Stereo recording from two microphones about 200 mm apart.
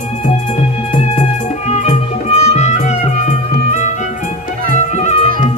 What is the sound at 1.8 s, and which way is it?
Music, 35° left (ahead or behind).